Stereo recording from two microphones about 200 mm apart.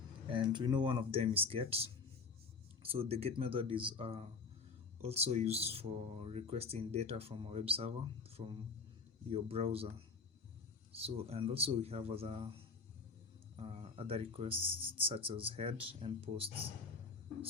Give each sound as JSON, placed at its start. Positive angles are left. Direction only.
{"t": 0.3, "sound": "speech", "side_deg": -25}
{"t": 10.9, "sound": "speech", "side_deg": -30}
{"t": 13.6, "sound": "speech", "side_deg": -30}